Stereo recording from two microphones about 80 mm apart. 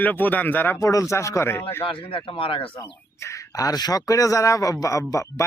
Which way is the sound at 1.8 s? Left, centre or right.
Left.